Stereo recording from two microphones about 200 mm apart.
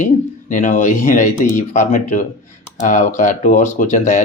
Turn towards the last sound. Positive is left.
turn(degrees=35)  # may be behind; listen again after turning